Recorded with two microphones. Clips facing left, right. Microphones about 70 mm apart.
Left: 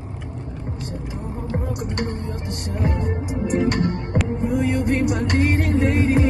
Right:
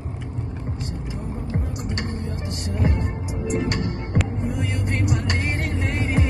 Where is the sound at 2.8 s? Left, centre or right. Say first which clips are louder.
Left 2 dB; left.